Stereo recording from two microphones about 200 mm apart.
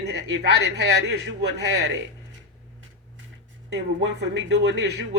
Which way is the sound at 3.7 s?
60° right (ahead or behind).